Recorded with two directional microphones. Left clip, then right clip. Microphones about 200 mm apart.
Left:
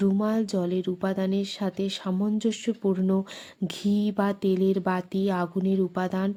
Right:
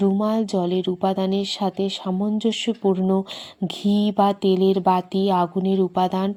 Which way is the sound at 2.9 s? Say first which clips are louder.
Right 5 dB; 30° left (ahead or behind).